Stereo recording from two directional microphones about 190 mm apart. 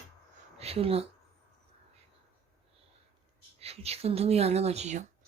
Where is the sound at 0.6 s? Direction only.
30° right (ahead or behind).